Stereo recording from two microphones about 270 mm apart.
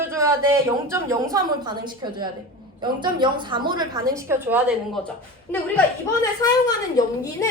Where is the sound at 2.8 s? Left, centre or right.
Centre.